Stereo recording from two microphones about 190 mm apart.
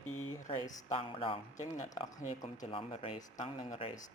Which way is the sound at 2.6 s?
30° left (ahead or behind).